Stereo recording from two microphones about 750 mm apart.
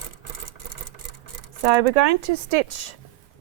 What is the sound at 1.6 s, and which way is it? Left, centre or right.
Speech, right.